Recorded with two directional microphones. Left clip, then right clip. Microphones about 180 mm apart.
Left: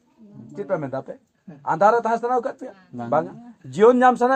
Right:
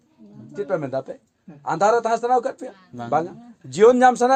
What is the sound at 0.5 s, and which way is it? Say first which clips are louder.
A man's voice: right 2 dB; 35° right (ahead or behind).